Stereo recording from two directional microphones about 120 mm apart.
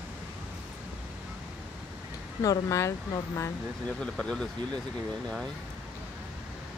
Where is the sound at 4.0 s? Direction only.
5° left (ahead or behind).